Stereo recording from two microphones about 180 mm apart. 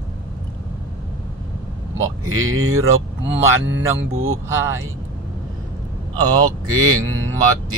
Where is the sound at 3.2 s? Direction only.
10° right (ahead or behind).